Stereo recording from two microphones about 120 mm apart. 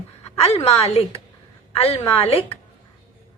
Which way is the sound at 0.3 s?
60° left (ahead or behind).